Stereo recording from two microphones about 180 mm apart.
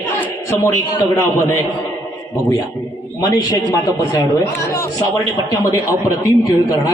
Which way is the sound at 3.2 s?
20° left (ahead or behind).